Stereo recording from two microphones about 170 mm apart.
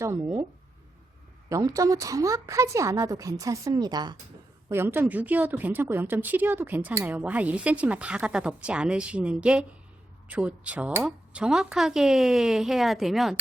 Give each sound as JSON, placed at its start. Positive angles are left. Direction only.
{"t": 0.0, "sound": "speech", "side_deg": -15}
{"t": 1.5, "sound": "a woman's voice", "side_deg": -20}
{"t": 4.7, "sound": "speech", "side_deg": -15}